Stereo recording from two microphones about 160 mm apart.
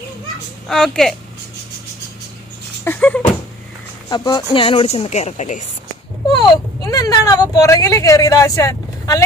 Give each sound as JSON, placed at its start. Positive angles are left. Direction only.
{"t": 0.7, "sound": "a woman's voice", "side_deg": 0}
{"t": 2.8, "sound": "a sound", "side_deg": 10}
{"t": 4.1, "sound": "a woman's voice", "side_deg": 25}
{"t": 6.8, "sound": "speech", "side_deg": 20}